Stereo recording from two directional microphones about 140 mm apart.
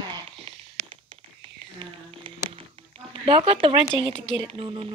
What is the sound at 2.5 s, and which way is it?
Speech, 40° right (ahead or behind).